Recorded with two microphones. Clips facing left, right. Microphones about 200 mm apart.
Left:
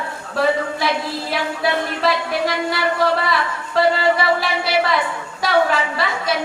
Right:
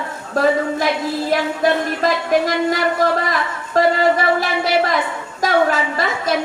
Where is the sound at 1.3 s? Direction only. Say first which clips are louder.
Right 4 dB; 45° right (ahead or behind).